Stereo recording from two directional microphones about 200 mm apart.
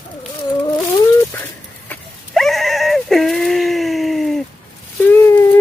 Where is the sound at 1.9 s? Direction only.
Centre (ahead or behind).